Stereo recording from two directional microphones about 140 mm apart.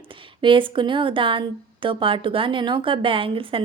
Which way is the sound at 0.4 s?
35° right (ahead or behind).